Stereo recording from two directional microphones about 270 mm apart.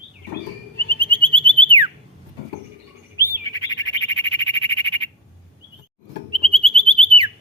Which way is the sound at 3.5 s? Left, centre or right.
Centre.